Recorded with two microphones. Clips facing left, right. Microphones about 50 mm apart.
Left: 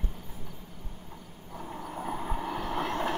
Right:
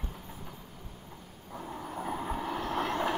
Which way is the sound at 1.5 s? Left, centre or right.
Centre.